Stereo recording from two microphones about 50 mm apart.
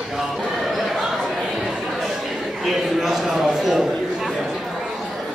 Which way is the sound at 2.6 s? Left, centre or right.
Centre.